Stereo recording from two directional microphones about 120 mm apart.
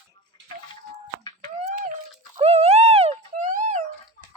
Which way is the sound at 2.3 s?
55° right (ahead or behind).